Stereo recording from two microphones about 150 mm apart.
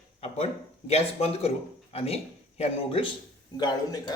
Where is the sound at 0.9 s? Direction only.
40° left (ahead or behind).